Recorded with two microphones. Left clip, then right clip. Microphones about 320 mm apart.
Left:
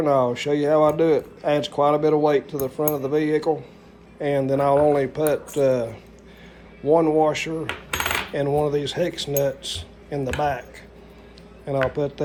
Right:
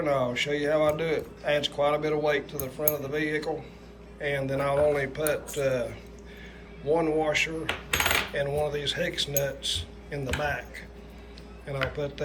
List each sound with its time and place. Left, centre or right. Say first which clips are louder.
0.0 s speech: left 6 dB; centre
6.9 s speech: left 7 dB; centre
7.9 s coin: left 2 dB; centre
11.6 s speech: left 8 dB; centre